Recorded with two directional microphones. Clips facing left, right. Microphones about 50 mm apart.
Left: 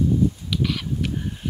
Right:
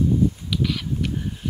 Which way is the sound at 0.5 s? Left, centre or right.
Centre.